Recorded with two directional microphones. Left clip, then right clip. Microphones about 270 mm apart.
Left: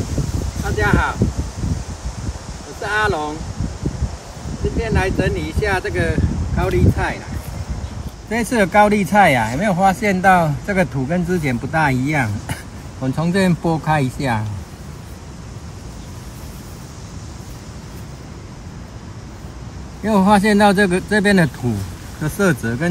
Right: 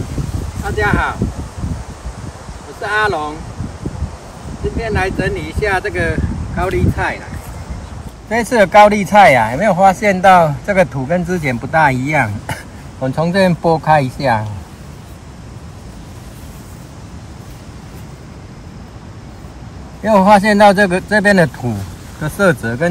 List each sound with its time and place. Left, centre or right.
0.7 s speech: centre
2.8 s speech: centre
4.7 s speech: centre
8.3 s speech: centre
20.0 s a man's voice: centre